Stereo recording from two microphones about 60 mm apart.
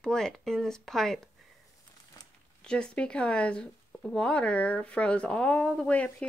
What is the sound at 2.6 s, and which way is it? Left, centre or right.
A woman's voice, centre.